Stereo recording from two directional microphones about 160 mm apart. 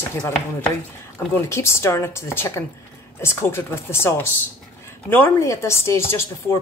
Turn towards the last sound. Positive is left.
turn(degrees=15)  # may be behind; listen again after turning